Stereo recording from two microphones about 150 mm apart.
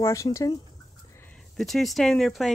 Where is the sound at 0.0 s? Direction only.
20° left (ahead or behind).